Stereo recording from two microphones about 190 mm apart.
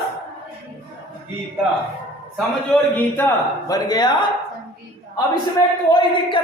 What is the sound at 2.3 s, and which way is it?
Speech, 10° left (ahead or behind).